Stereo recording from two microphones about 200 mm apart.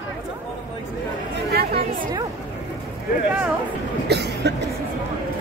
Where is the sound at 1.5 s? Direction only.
55° right (ahead or behind).